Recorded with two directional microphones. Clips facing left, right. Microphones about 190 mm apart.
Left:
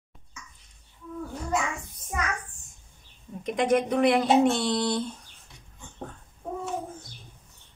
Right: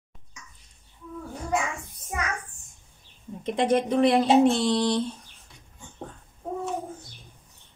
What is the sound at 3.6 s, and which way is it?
Speech, 30° right (ahead or behind).